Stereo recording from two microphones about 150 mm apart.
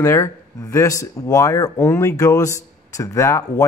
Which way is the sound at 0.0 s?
20° left (ahead or behind).